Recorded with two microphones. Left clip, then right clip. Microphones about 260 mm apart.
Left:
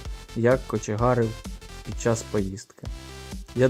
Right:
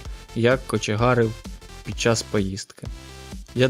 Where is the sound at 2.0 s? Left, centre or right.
Right.